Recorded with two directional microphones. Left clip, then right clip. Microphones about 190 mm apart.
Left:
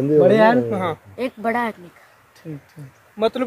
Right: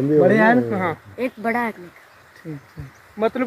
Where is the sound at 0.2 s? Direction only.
5° right (ahead or behind).